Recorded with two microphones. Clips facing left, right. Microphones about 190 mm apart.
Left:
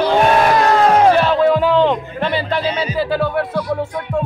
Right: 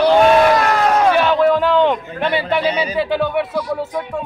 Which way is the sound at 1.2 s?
5° left (ahead or behind).